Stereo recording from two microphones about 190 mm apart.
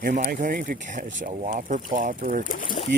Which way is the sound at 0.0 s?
45° right (ahead or behind).